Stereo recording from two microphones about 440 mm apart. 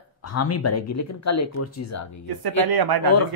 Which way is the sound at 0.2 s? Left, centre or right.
Left.